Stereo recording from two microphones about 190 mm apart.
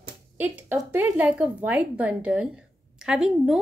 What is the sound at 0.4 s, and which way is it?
A woman's voice, 10° right (ahead or behind).